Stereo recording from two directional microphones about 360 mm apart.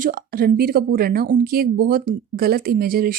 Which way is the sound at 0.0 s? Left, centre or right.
Right.